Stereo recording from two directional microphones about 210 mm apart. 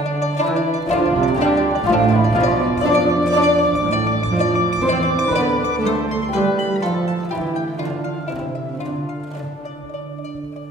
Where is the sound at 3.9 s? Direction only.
30° left (ahead or behind).